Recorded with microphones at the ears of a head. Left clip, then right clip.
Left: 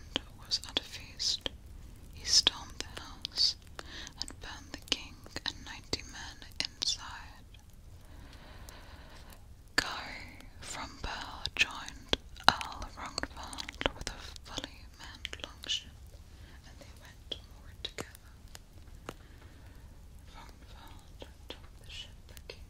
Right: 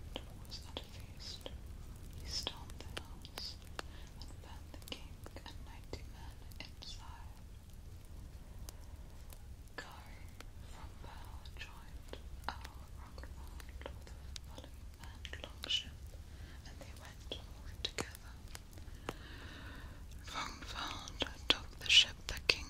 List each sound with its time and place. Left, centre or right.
0.1 s whispering: left
9.8 s whispering: left
17.8 s whispering: centre
20.2 s whispering: right